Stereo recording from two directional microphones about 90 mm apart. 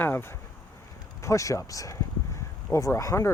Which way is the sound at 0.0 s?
25° left (ahead or behind).